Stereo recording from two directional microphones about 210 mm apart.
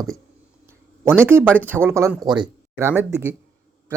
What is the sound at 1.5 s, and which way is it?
Speech, 10° right (ahead or behind).